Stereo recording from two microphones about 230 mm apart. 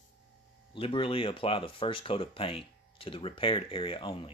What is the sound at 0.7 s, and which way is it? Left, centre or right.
Speech, left.